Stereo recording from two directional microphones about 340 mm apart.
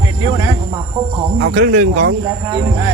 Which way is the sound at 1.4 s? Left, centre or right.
Right.